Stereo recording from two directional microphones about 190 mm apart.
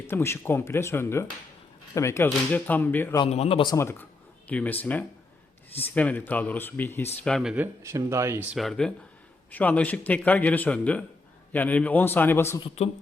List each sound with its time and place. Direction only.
0.1 s speech: 15° left (ahead or behind)
3.2 s speech: 35° left (ahead or behind)
4.4 s speech: 10° left (ahead or behind); by 8.4 s 15° right (ahead or behind)
8.5 s speech: centre (ahead or behind)
12.6 s speech: 35° left (ahead or behind)